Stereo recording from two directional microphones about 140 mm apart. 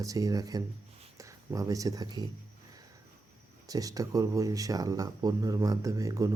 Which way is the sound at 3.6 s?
25° right (ahead or behind).